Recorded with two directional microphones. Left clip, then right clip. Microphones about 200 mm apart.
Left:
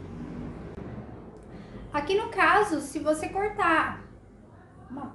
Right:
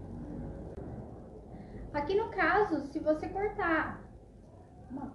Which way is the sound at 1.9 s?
20° left (ahead or behind).